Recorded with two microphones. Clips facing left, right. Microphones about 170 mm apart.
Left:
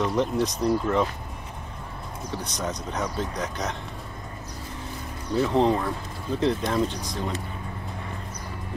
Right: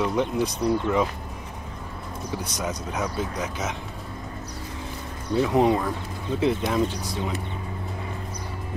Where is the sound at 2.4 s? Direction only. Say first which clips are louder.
Right 1 dB; 10° right (ahead or behind).